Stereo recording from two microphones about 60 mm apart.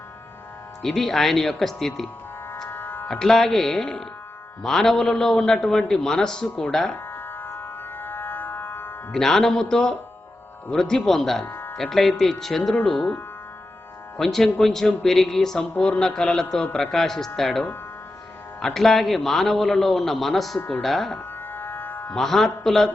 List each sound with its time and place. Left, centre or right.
0.8 s a man's voice: centre
2.6 s music: left
3.1 s a man's voice: centre
6.9 s music: left
7.9 s a sound: left
9.1 s speech: centre
11.4 s a sound: left
11.8 s a man's voice: centre
12.7 s speech: left
14.2 s a man's voice: centre
20.6 s speech: left
20.8 s a man's voice: centre
21.5 s music: left
22.1 s a man's voice: centre